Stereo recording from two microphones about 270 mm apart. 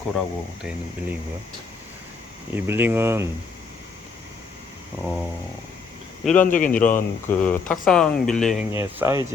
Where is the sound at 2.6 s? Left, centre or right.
Centre.